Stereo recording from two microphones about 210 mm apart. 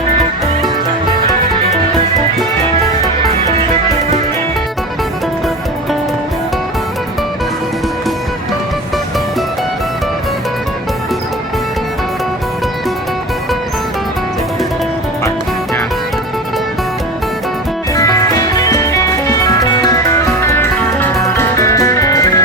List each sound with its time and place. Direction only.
17.9 s music: 15° left (ahead or behind)